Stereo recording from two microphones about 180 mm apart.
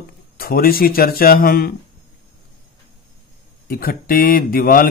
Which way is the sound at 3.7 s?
55° left (ahead or behind).